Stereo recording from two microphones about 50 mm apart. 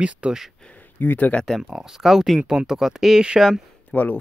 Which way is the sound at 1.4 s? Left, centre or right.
Centre.